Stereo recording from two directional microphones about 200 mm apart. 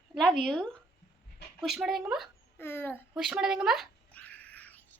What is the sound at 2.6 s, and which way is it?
Speech, 10° left (ahead or behind).